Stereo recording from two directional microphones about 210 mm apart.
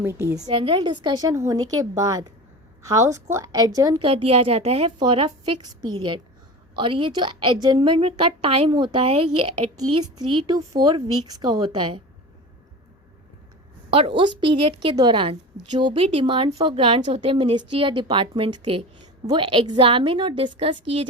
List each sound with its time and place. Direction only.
0.0 s a woman's voice: 10° right (ahead or behind)
0.4 s a woman's voice: 25° right (ahead or behind)
14.2 s a woman's voice: 25° right (ahead or behind)